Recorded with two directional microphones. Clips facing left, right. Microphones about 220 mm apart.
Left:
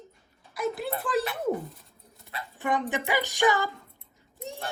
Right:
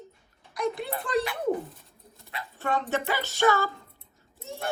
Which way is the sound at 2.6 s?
15° left (ahead or behind).